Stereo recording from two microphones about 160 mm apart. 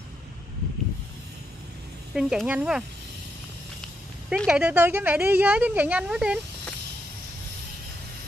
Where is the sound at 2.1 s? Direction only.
5° right (ahead or behind).